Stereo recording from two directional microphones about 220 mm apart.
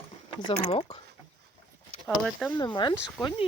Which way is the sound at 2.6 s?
20° left (ahead or behind).